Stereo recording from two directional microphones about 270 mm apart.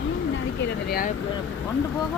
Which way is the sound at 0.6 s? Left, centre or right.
Left.